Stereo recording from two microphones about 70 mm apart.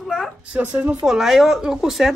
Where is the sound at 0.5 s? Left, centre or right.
Centre.